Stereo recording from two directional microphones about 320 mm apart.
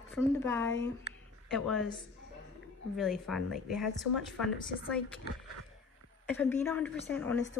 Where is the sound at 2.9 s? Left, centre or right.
Centre.